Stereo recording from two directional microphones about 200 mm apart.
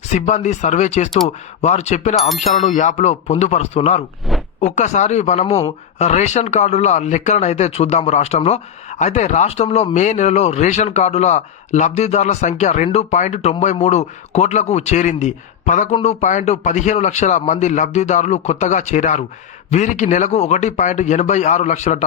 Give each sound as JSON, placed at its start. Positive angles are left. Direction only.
{"t": 0.1, "sound": "speech", "side_deg": 35}
{"t": 4.3, "sound": "a sound", "side_deg": 0}
{"t": 4.6, "sound": "speech", "side_deg": 35}